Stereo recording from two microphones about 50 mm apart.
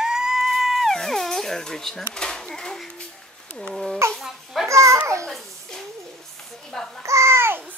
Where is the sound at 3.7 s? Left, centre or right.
Centre.